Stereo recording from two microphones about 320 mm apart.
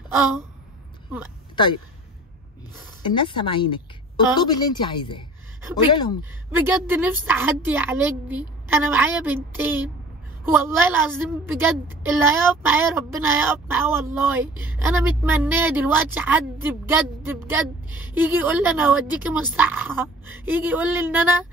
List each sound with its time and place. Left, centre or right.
1.5 s speech: centre
3.1 s speech: centre
6.5 s a woman's voice: centre